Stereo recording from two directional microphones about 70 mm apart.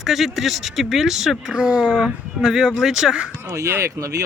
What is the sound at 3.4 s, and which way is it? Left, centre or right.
Speech, right.